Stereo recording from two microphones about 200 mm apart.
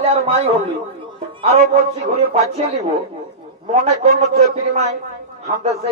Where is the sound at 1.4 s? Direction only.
30° right (ahead or behind).